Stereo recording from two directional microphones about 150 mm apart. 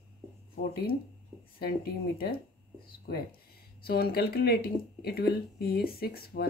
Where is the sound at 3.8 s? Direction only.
90° left.